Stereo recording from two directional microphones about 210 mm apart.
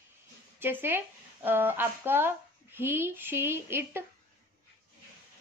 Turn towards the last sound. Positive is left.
turn(degrees=-10)  # may be behind; listen again after turning